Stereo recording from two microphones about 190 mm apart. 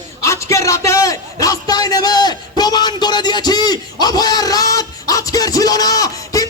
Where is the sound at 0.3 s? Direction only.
15° left (ahead or behind).